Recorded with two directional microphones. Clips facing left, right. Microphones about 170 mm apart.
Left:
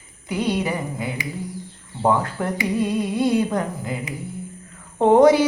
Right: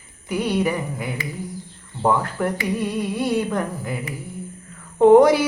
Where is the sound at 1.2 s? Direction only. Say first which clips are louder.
Even; 15° left (ahead or behind).